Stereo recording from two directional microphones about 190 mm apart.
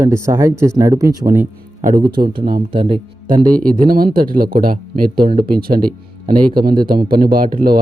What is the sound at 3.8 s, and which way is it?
Speech, 50° right (ahead or behind).